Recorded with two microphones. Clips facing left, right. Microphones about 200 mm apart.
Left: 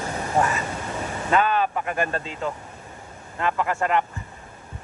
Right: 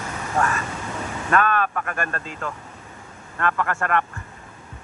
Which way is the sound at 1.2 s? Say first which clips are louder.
Even; 20° left (ahead or behind).